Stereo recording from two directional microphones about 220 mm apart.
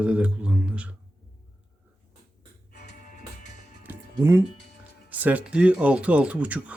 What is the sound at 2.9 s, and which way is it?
Music, 35° left (ahead or behind).